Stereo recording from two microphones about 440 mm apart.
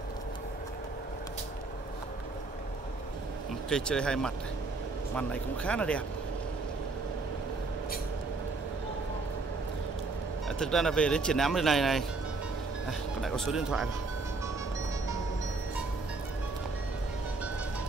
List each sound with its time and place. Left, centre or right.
3.7 s speech: centre
10.6 s speech: centre
13.2 s speech: centre